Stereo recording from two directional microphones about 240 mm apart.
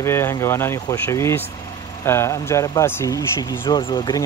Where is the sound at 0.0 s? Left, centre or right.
Centre.